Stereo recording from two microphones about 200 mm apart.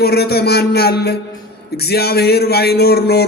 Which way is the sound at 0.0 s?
55° left (ahead or behind).